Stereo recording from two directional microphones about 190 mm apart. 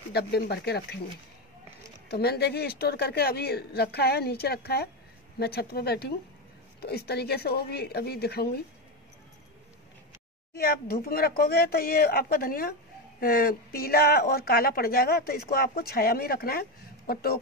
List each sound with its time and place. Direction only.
0.1 s speech: 60° left (ahead or behind)
2.0 s speech: 55° left (ahead or behind)
10.6 s speech: 55° left (ahead or behind)